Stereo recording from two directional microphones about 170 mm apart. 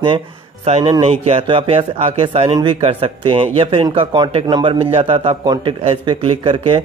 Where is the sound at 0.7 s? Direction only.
35° right (ahead or behind).